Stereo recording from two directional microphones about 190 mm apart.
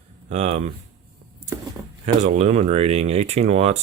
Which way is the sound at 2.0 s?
35° right (ahead or behind).